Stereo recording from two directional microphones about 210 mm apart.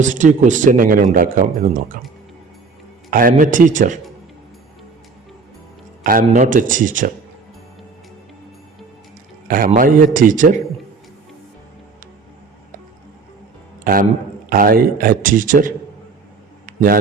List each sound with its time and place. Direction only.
0.0 s speech: 35° right (ahead or behind)
3.1 s speech: 40° right (ahead or behind)
6.0 s speech: 40° right (ahead or behind)
9.5 s speech: 40° right (ahead or behind)
13.9 s a man's voice: 45° right (ahead or behind)
16.6 s a sound: 45° right (ahead or behind)